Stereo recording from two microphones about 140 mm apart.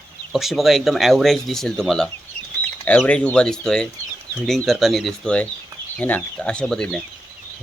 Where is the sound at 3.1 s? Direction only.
10° left (ahead or behind).